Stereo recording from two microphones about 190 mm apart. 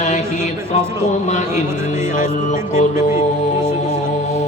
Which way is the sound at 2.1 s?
40° left (ahead or behind).